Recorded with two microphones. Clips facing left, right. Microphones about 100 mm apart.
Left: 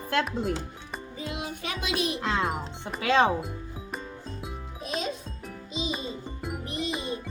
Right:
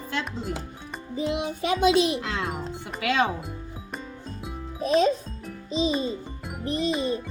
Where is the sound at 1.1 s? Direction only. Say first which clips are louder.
Right 9 dB; 25° right (ahead or behind).